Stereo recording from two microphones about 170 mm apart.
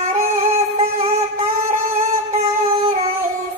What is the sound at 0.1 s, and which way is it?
Music, 40° right (ahead or behind).